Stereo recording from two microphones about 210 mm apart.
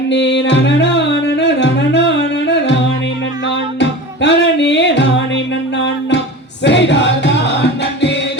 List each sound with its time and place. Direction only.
0.1 s music: 55° left (ahead or behind)
3.8 s music: 55° left (ahead or behind)
6.7 s music: 60° left (ahead or behind)